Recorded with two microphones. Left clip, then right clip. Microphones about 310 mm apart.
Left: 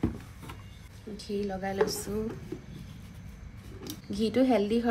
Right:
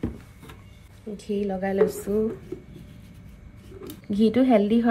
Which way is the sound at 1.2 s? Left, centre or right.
Centre.